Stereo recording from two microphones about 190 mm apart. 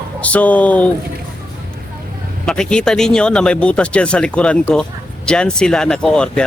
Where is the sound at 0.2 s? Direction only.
10° left (ahead or behind).